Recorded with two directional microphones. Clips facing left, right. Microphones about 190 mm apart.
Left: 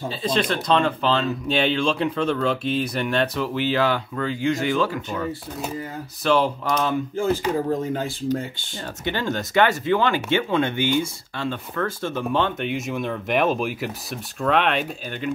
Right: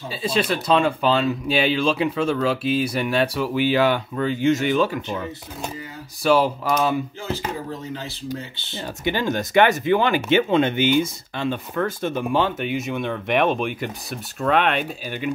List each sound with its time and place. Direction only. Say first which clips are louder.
0.1 s speech: right 2 dB; 10° right (ahead or behind)
6.2 s speech: right 2 dB; 5° right (ahead or behind)
7.2 s speech: left 7 dB; 50° left (ahead or behind)
9.0 s speech: right 3 dB; 15° right (ahead or behind)